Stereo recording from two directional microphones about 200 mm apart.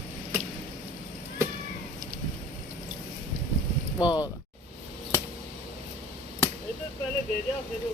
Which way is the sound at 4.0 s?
20° left (ahead or behind).